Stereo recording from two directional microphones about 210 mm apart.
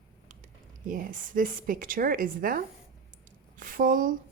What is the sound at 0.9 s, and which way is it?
A woman's voice, 40° right (ahead or behind).